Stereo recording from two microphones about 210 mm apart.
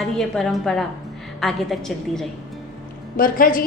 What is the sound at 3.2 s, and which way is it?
Speech, 40° left (ahead or behind).